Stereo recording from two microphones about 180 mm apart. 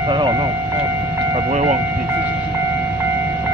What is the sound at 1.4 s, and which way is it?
Speech, 40° right (ahead or behind).